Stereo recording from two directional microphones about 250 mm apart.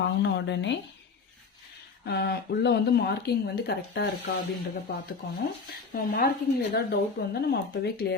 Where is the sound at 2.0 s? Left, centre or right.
Left.